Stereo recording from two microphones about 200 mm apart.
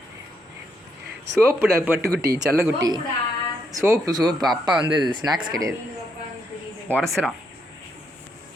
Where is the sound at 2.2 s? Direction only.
55° right (ahead or behind).